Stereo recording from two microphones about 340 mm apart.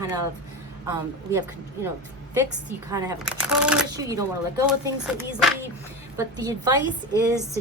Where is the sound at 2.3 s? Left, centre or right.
Centre.